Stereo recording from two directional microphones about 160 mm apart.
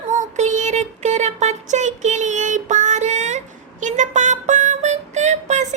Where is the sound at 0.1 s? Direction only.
50° right (ahead or behind).